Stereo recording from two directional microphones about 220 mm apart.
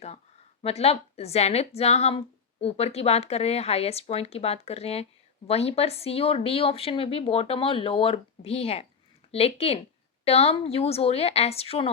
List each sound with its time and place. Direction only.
0.6 s a woman's voice: 30° left (ahead or behind)